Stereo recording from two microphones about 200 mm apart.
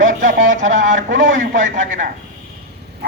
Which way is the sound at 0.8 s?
40° right (ahead or behind).